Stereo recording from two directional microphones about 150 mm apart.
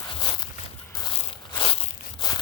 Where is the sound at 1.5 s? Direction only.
35° left (ahead or behind).